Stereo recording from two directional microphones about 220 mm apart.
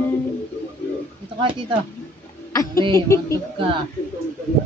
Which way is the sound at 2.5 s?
15° left (ahead or behind).